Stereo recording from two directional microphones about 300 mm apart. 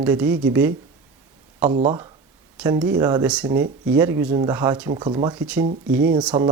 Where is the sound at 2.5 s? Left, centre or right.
Centre.